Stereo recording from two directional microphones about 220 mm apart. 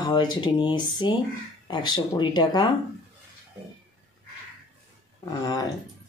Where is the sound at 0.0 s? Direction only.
20° left (ahead or behind).